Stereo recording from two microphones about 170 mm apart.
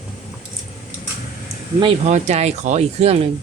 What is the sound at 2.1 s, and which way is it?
Speech, 45° right (ahead or behind).